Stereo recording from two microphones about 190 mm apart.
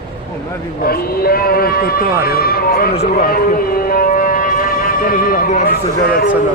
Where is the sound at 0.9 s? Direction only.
50° left (ahead or behind).